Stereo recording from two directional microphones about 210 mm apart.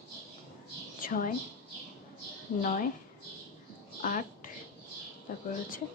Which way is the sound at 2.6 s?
40° left (ahead or behind).